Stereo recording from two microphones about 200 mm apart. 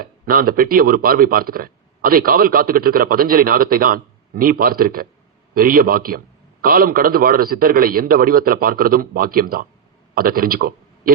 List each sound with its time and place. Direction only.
0.0 s a man's voice: 45° right (ahead or behind)